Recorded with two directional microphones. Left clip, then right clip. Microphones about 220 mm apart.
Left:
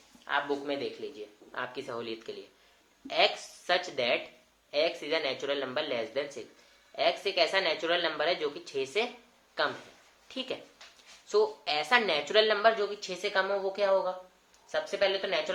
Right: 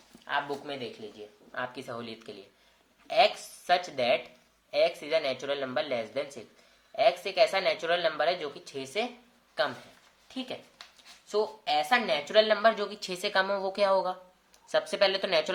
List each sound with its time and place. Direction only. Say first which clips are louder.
0.3 s speech: left 1 dB; 30° right (ahead or behind)
10.2 s a woman's voice: left 2 dB; 20° right (ahead or behind); by 15.5 s 40° right (ahead or behind)